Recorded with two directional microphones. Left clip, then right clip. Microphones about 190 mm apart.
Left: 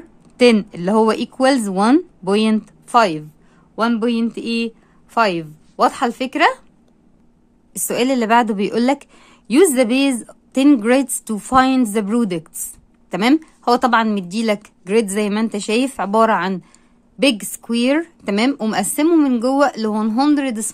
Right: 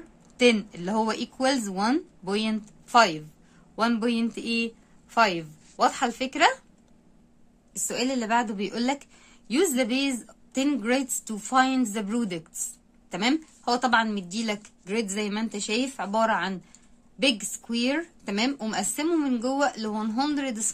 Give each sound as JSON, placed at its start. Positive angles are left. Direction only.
{"t": 0.4, "sound": "speech", "side_deg": 35}
{"t": 7.7, "sound": "a woman's voice", "side_deg": 50}
{"t": 8.3, "sound": "speech", "side_deg": 35}